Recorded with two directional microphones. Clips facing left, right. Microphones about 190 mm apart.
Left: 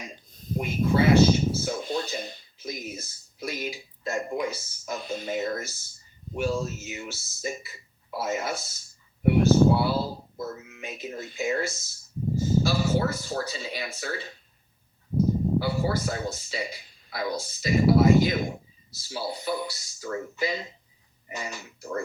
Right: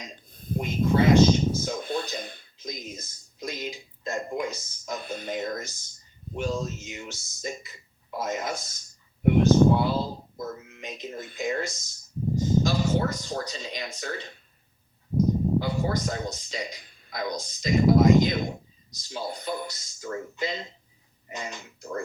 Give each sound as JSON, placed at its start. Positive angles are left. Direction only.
{"t": 0.3, "sound": "a sound", "side_deg": -55}
{"t": 0.6, "sound": "speech", "side_deg": 10}
{"t": 1.8, "sound": "speech", "side_deg": -55}
{"t": 2.6, "sound": "speech", "side_deg": 10}
{"t": 5.0, "sound": "speech", "side_deg": -55}
{"t": 5.3, "sound": "speech", "side_deg": 10}
{"t": 15.6, "sound": "speech", "side_deg": 5}